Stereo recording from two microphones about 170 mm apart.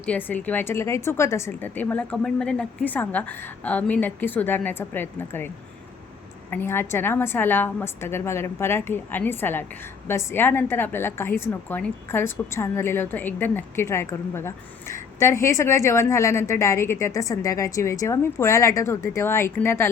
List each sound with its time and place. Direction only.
0.0 s a woman's voice: 10° left (ahead or behind)
6.5 s a woman's voice: 10° left (ahead or behind)